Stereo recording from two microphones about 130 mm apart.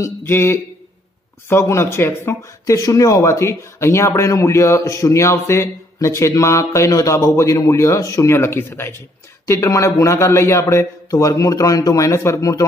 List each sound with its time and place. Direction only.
0.0 s speech: 20° left (ahead or behind)